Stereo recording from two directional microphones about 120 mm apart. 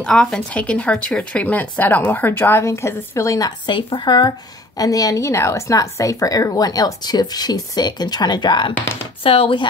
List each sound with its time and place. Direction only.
0.0 s speech: 5° left (ahead or behind); by 8.7 s 40° left (ahead or behind)
9.2 s speech: 50° left (ahead or behind)